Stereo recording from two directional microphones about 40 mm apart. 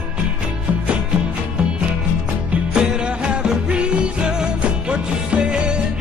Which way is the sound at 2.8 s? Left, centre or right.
Right.